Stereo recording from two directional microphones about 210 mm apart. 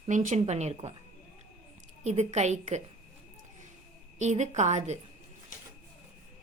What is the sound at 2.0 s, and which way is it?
Speech, 30° right (ahead or behind).